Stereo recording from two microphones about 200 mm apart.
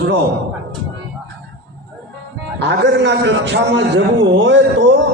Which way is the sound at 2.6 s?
60° right (ahead or behind).